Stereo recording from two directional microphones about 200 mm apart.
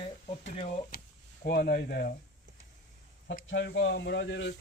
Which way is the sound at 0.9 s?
50° left (ahead or behind).